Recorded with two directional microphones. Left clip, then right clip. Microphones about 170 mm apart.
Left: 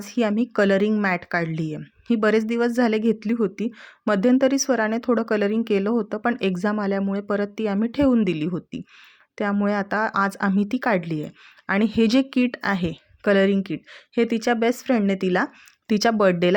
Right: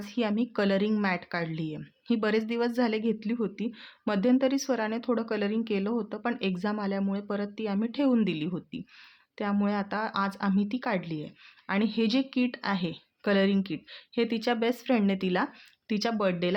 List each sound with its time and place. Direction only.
0.0 s speech: 35° left (ahead or behind)
15.9 s speech: 45° left (ahead or behind)